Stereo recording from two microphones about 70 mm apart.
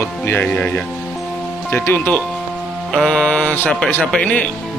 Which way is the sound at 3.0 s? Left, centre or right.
Centre.